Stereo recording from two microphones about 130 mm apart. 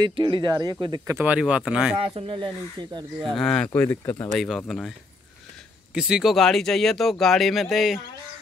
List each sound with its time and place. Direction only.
0.0 s speech: 40° right (ahead or behind)
1.1 s speech: 10° right (ahead or behind)
2.1 s speech: 40° right (ahead or behind)
3.3 s speech: 5° left (ahead or behind)
4.4 s speech: centre (ahead or behind)
5.9 s speech: 5° right (ahead or behind)